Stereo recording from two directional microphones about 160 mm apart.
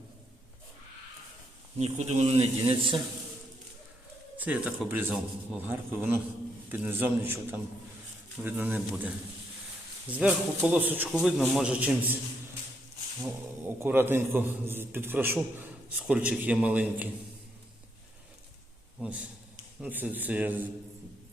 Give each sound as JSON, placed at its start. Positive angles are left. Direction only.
{"t": 1.8, "sound": "a man's voice", "side_deg": -45}
{"t": 4.4, "sound": "a man's voice", "side_deg": -10}
{"t": 13.2, "sound": "a man's voice", "side_deg": -10}
{"t": 18.9, "sound": "a man's voice", "side_deg": -5}